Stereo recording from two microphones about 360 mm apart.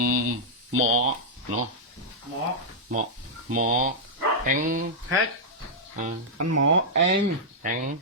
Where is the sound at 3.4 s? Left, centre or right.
Right.